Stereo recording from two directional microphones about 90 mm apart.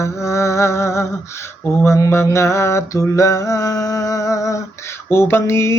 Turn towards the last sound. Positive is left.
turn(degrees=30)  # may be behind; listen again after turning